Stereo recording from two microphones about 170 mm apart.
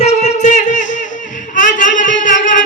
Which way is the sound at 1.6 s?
50° left (ahead or behind).